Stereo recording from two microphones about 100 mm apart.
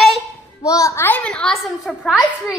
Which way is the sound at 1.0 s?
15° left (ahead or behind).